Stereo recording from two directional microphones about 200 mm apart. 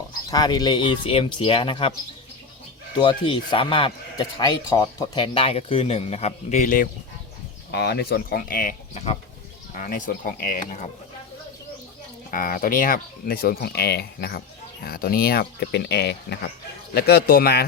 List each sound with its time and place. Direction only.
0.3 s a man's voice: 20° left (ahead or behind)
3.0 s a man's voice: 25° left (ahead or behind); by 6.8 s 40° left (ahead or behind)
7.7 s speech: 55° left (ahead or behind)
12.3 s speech: 45° left (ahead or behind)